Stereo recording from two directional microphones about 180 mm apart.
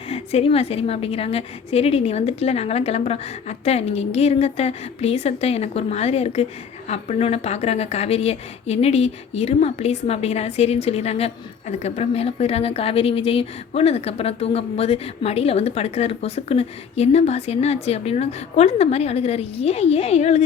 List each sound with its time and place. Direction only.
0.1 s speech: 35° left (ahead or behind)